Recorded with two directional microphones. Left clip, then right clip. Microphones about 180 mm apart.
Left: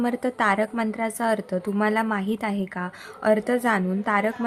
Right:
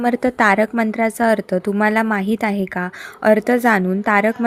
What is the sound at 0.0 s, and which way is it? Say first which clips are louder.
A woman's voice: right 8 dB; 30° right (ahead or behind).